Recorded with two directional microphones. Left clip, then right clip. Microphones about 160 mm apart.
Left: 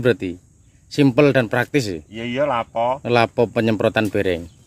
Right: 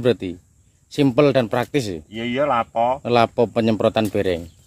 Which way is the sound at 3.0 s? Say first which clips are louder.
Left 2 dB; 25° left (ahead or behind).